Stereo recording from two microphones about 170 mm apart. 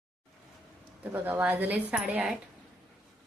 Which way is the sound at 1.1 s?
10° right (ahead or behind).